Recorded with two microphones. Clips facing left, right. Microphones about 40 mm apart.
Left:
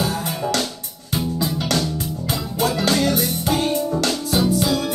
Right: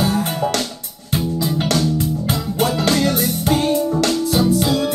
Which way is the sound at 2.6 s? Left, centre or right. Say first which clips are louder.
Right 2 dB; right.